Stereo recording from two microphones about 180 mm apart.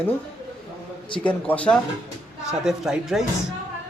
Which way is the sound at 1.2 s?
5° left (ahead or behind).